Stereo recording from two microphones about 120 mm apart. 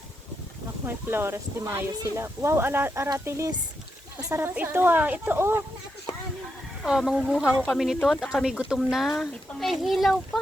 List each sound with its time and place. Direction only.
0.9 s a woman's voice: 20° right (ahead or behind)
6.1 s a sound: 55° left (ahead or behind)
6.8 s speech: 5° right (ahead or behind)